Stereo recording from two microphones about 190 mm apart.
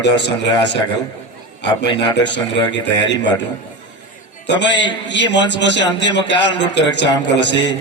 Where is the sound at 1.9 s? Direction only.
25° left (ahead or behind).